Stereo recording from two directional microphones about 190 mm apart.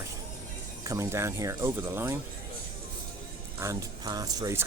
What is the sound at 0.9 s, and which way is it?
Speech, 15° right (ahead or behind).